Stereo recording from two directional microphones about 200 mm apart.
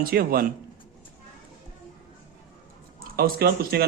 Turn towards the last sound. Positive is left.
turn(degrees=-50)  # may be behind; listen again after turning